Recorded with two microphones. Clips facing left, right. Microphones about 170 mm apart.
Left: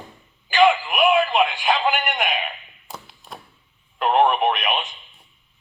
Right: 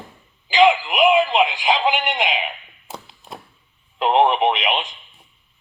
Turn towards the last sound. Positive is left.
turn(degrees=-20)  # may be behind; listen again after turning